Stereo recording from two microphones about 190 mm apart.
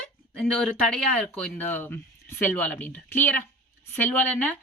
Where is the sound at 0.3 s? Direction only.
5° left (ahead or behind).